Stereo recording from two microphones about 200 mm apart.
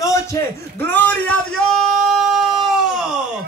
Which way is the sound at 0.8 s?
10° left (ahead or behind).